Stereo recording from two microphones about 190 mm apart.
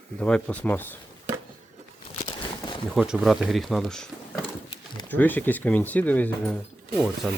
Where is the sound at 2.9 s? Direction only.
Centre (ahead or behind).